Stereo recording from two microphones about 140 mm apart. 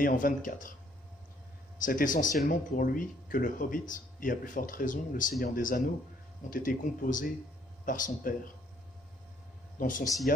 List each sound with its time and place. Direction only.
0.0 s speech: 75° left (ahead or behind)
1.9 s speech: 70° left (ahead or behind)
2.4 s speech: 80° left
9.8 s speech: 70° left (ahead or behind)
10.3 s speech: 90° left